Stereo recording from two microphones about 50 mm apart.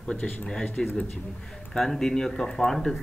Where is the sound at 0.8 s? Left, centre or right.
Centre.